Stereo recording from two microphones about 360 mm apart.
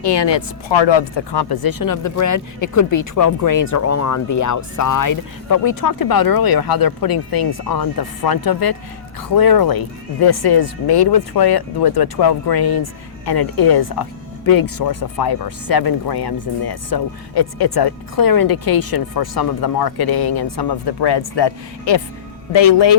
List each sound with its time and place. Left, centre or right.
0.0 s speech: left
1.3 s speech: left